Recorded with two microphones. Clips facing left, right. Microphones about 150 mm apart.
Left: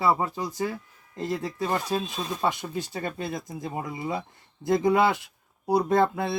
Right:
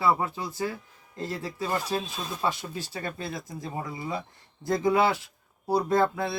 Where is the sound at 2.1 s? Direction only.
Centre (ahead or behind).